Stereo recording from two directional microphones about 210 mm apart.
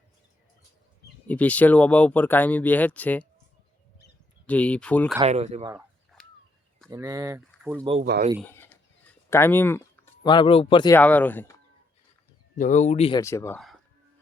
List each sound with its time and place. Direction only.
1.3 s speech: 5° left (ahead or behind)
4.4 s speech: 5° left (ahead or behind)
5.2 s speech: 30° right (ahead or behind)
6.2 s a sound: 5° left (ahead or behind)
6.9 s speech: 15° right (ahead or behind)
8.4 s bird: 10° left (ahead or behind)
9.3 s speech: 10° left (ahead or behind)
10.2 s speech: 25° left (ahead or behind)
10.9 s speech: 10° left (ahead or behind)
12.5 s speech: 35° left (ahead or behind)
13.2 s speech: 10° left (ahead or behind)